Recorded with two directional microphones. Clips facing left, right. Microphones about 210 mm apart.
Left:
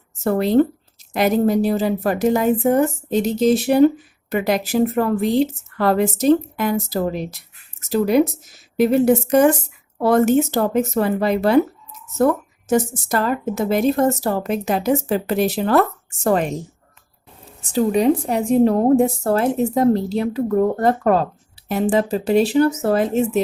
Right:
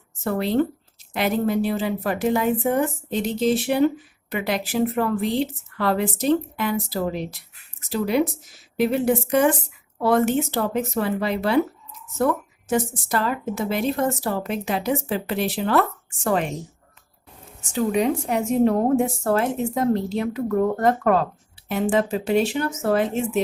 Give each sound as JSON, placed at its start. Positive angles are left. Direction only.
{"t": 0.2, "sound": "a woman's voice", "side_deg": 40}
{"t": 17.6, "sound": "a woman's voice", "side_deg": 35}